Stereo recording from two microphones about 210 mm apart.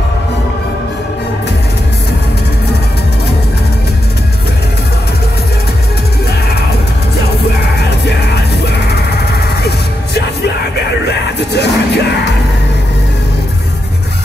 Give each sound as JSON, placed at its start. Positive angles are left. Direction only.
{"t": 9.6, "sound": "music", "side_deg": 50}
{"t": 11.3, "sound": "music", "side_deg": 55}